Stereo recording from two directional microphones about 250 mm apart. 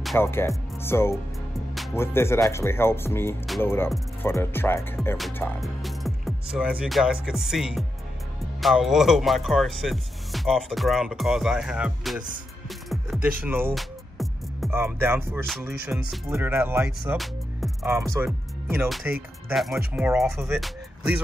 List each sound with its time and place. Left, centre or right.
0.0 s speech: centre
12.6 s music: centre
13.4 s speech: centre